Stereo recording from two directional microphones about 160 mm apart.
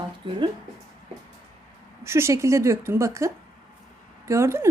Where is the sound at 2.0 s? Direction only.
15° right (ahead or behind).